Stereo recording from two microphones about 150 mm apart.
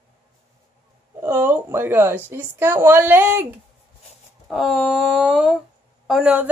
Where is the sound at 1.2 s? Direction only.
15° right (ahead or behind).